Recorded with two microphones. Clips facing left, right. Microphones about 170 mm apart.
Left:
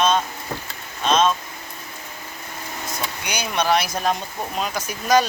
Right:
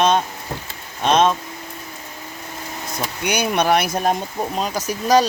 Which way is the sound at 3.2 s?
60° right (ahead or behind).